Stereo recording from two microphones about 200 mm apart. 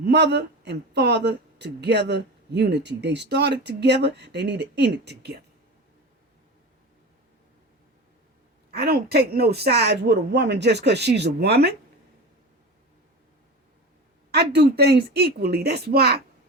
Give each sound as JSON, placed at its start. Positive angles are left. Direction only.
{"t": 0.0, "sound": "speech", "side_deg": -55}
{"t": 8.7, "sound": "speech", "side_deg": -50}
{"t": 14.3, "sound": "speech", "side_deg": -55}